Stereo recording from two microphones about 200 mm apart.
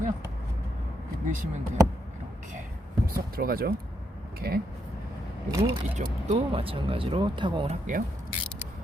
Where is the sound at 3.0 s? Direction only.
45° right (ahead or behind).